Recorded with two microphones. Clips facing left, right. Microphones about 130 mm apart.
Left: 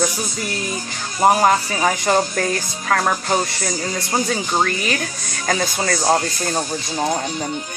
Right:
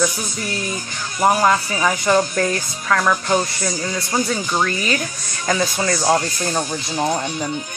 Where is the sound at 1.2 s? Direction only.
30° left (ahead or behind).